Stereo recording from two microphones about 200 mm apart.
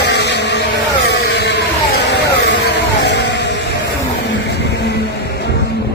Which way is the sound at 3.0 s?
60° left (ahead or behind).